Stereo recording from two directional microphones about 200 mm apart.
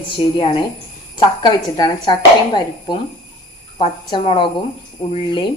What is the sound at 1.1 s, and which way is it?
Speech, 20° left (ahead or behind).